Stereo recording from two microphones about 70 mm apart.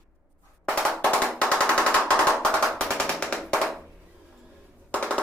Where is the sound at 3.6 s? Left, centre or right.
Centre.